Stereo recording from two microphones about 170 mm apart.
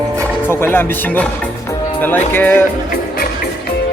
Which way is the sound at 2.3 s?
10° left (ahead or behind).